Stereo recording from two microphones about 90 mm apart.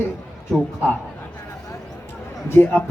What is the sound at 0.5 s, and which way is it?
Speech, centre (ahead or behind).